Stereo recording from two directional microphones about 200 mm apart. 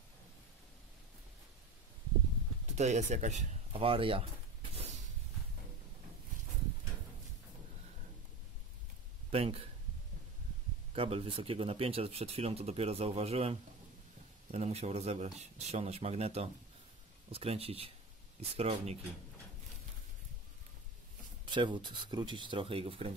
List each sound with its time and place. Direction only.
2.7 s speech: 35° right (ahead or behind)
9.3 s speech: 30° right (ahead or behind)
11.0 s speech: 30° right (ahead or behind)
21.5 s speech: 25° right (ahead or behind)